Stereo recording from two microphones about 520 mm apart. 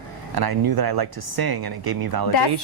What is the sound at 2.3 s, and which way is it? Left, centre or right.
Speech, left.